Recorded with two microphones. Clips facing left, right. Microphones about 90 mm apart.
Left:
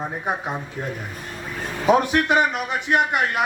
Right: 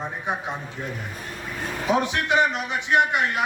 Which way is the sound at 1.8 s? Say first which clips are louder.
Left 5 dB; 50° left (ahead or behind).